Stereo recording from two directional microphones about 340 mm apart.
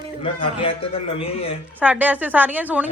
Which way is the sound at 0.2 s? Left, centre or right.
Centre.